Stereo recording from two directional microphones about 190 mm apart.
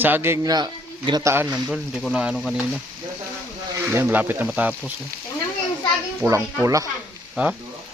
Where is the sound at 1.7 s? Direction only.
Centre (ahead or behind).